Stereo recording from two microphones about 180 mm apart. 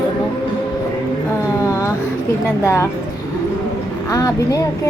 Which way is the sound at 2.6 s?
15° left (ahead or behind).